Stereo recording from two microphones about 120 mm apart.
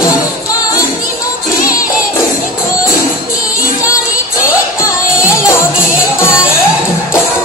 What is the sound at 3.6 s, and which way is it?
Music, 25° left (ahead or behind).